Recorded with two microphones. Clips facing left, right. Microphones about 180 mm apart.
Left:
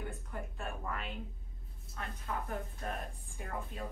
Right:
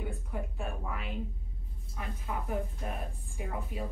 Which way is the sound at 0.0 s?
5° right (ahead or behind).